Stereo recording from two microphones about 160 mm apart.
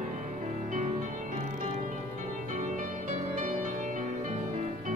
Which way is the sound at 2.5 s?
50° right (ahead or behind).